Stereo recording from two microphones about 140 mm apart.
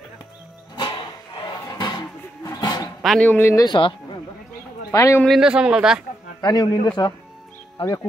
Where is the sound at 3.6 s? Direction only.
35° left (ahead or behind).